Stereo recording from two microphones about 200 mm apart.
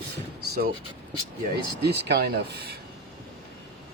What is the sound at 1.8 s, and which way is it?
Speech, 55° right (ahead or behind).